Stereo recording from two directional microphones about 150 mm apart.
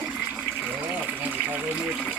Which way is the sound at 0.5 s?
10° right (ahead or behind).